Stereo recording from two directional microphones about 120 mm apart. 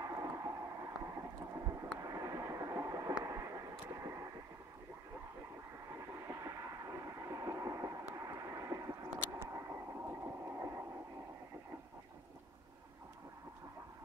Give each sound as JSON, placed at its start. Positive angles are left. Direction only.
{"t": 0.0, "sound": "a sound", "side_deg": -30}
{"t": 1.8, "sound": "vehicle", "side_deg": -30}
{"t": 5.9, "sound": "train", "side_deg": -25}
{"t": 8.1, "sound": "vehicle", "side_deg": -25}
{"t": 9.4, "sound": "radio", "side_deg": -20}